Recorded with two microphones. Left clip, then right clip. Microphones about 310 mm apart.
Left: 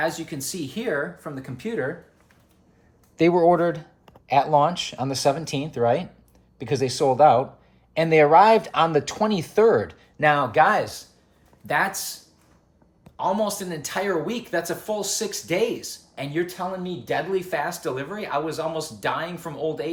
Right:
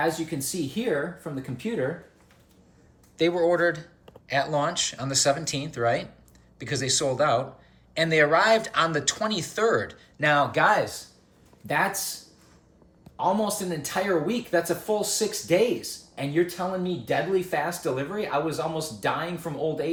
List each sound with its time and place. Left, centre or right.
0.0 s speech: centre
3.2 s speech: centre
11.6 s speech: centre
13.1 s speech: centre